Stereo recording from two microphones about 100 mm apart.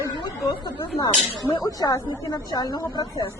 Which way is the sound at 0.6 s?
45° left (ahead or behind).